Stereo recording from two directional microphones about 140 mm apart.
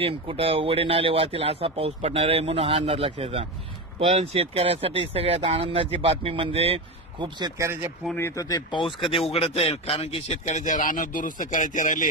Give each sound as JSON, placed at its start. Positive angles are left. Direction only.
{"t": 0.0, "sound": "speech", "side_deg": -40}
{"t": 8.2, "sound": "speech", "side_deg": 20}
{"t": 9.3, "sound": "a man's voice", "side_deg": 45}